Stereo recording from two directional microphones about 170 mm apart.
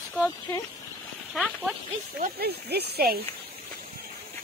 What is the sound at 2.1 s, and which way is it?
Speech, 65° right (ahead or behind).